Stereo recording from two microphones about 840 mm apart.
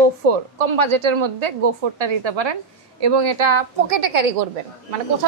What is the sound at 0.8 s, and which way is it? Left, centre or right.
A woman's voice, right.